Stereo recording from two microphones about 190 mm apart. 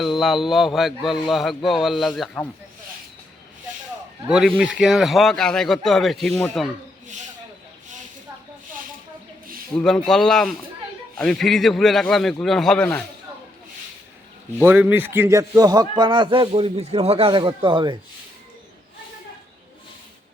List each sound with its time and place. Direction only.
0.0 s a man's voice: centre (ahead or behind)
4.3 s a man's voice: centre (ahead or behind)
9.7 s a man's voice: 5° left (ahead or behind)
14.6 s a man's voice: 10° right (ahead or behind); by 17.9 s 25° right (ahead or behind)